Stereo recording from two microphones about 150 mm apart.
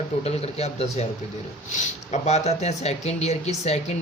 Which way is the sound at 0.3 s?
45° left (ahead or behind).